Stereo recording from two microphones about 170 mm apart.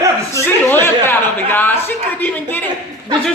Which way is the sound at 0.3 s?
15° left (ahead or behind).